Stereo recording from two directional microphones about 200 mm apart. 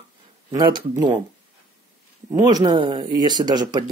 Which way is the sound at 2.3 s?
20° right (ahead or behind).